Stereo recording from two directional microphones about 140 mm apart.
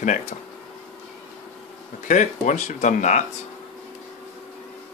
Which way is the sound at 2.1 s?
65° left (ahead or behind).